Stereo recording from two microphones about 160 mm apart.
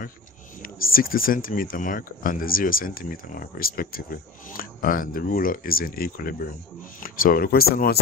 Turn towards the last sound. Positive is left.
turn(degrees=70)  # may be behind; listen again after turning